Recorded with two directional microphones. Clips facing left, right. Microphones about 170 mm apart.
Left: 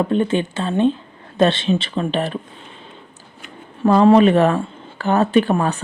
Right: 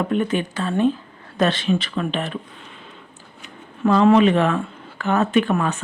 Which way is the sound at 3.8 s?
40° left (ahead or behind).